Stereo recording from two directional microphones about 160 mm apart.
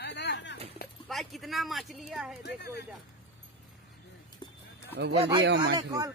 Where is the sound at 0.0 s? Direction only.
90° left.